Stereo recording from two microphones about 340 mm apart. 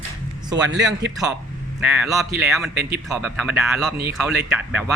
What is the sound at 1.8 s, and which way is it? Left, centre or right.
Speech, centre.